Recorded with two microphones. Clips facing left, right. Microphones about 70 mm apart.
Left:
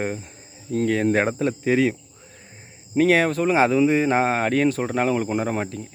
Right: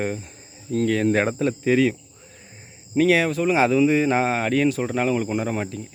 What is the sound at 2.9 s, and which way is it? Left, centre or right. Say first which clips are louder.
Speech: left 1 dB; left.